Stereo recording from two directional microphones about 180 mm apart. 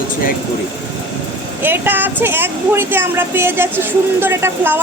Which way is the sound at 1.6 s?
10° right (ahead or behind).